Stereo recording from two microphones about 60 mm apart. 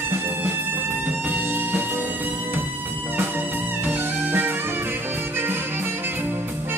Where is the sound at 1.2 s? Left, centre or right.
Right.